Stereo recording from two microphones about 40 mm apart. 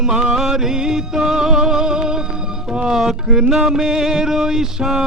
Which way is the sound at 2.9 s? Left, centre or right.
Centre.